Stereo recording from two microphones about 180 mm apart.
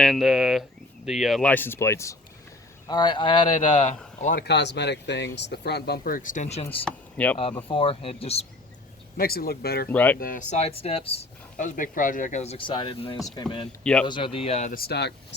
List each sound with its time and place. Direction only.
0.0 s speech: centre (ahead or behind); by 3.9 s 30° left (ahead or behind)
4.2 s speech: 50° left (ahead or behind)
4.4 s speech: 75° left (ahead or behind); by 6.7 s 40° left (ahead or behind)
6.8 s speech: 10° left (ahead or behind)
7.7 s speech: 30° left (ahead or behind)
9.1 s speech: 55° left (ahead or behind)
9.9 s speech: 10° left (ahead or behind)
10.2 s speech: 50° left (ahead or behind); by 11.2 s 35° left (ahead or behind)
11.5 s speech: 50° left (ahead or behind)
14.7 s speech: 60° left (ahead or behind)